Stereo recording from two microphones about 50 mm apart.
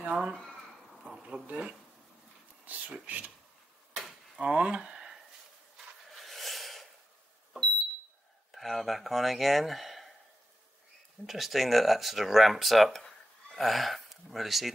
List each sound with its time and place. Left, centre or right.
0.1 s speech: centre
1.2 s speech: right
3.1 s speech: right
4.4 s speech: right
6.1 s a sound: centre
8.5 s speech: centre
11.2 s speech: centre